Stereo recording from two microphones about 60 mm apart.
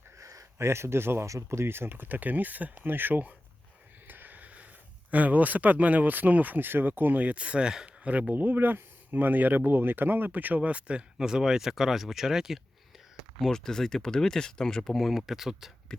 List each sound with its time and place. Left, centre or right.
0.2 s a sound: right
0.6 s speech: right
1.3 s speech: right
4.0 s a sound: right
5.1 s speech: right
8.3 s speech: right; by 12.5 s centre
13.4 s speech: centre
14.9 s speech: centre